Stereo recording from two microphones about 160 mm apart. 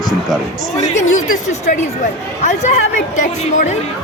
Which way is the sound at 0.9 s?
50° left (ahead or behind).